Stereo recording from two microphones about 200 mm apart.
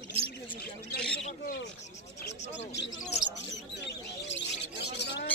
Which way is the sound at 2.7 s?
60° left (ahead or behind).